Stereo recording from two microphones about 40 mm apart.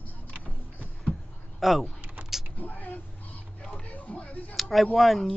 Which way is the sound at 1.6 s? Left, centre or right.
Centre.